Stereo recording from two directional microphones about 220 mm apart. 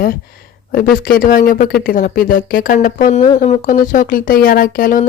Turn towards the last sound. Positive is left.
turn(degrees=40)  # may be behind; listen again after turning